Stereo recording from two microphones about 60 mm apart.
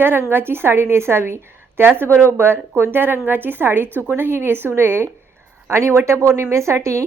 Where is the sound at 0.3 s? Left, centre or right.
Right.